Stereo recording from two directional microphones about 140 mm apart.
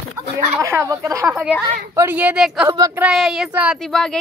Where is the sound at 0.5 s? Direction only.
20° right (ahead or behind).